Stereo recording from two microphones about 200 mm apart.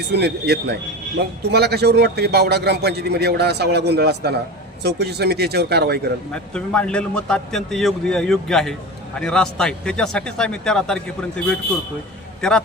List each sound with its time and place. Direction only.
0.1 s a man's voice: 55° right (ahead or behind)
6.3 s a man's voice: 5° left (ahead or behind)